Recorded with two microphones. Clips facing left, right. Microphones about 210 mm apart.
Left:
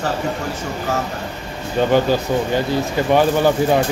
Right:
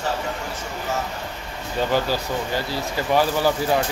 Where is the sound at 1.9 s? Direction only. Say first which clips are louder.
Left 7 dB; 20° left (ahead or behind).